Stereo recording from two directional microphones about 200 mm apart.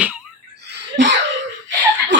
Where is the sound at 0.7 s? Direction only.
60° right (ahead or behind).